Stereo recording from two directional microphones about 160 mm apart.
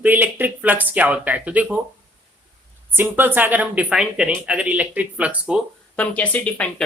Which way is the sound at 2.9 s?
10° right (ahead or behind).